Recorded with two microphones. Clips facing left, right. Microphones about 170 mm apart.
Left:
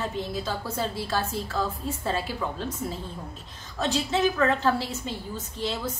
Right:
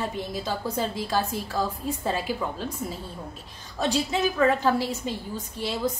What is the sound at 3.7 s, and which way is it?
A woman's voice, 10° right (ahead or behind).